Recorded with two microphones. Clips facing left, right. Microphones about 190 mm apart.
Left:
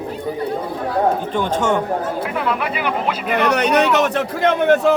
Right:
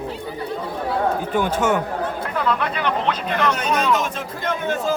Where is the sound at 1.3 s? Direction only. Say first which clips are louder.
Left 1 dB; 10° right (ahead or behind).